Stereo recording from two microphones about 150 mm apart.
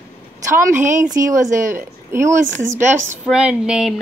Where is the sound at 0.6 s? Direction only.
15° right (ahead or behind).